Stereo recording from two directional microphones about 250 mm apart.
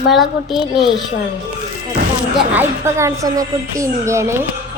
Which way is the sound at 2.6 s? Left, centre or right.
Centre.